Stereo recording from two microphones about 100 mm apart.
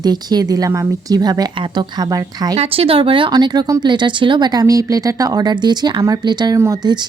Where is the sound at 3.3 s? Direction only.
45° right (ahead or behind).